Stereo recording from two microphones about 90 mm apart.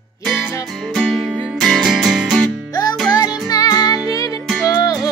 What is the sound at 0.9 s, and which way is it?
Music, centre (ahead or behind).